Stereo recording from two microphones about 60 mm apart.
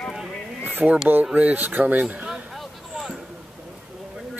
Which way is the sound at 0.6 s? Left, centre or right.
Right.